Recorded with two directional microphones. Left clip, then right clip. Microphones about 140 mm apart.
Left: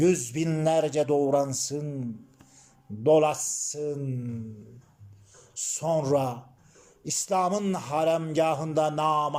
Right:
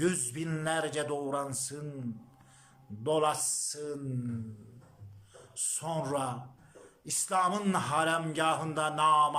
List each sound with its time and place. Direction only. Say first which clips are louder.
0.0 s a man's voice: left 8 dB; 25° left (ahead or behind)
5.5 s a man's voice: left 8 dB; 25° left (ahead or behind)